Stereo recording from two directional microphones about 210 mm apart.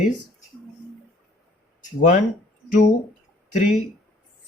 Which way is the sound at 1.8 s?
35° left (ahead or behind).